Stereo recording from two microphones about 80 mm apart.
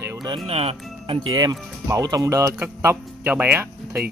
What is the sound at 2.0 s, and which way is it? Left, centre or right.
Speech, right.